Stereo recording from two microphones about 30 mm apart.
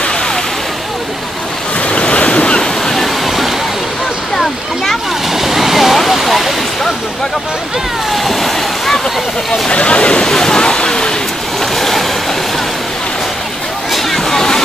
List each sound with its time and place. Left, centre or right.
1.9 s waves: left
2.6 s waterfall: centre
5.3 s waterfall: centre
6.0 s a sound: centre
8.1 s a sound: centre
9.5 s speech: left
10.2 s speech: centre
11.7 s waves: centre
14.3 s a sound: centre